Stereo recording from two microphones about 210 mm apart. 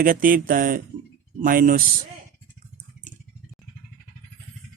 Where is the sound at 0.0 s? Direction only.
40° right (ahead or behind).